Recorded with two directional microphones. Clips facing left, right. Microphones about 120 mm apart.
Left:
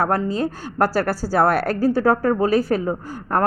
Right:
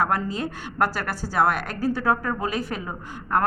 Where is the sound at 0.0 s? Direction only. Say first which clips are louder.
Left 4 dB; 35° left (ahead or behind).